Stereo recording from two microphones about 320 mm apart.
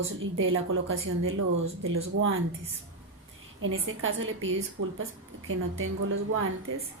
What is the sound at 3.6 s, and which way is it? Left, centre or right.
A woman's voice, right.